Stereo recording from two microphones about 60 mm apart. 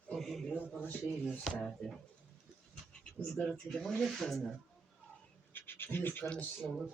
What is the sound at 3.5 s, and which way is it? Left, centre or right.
A child's voice, centre.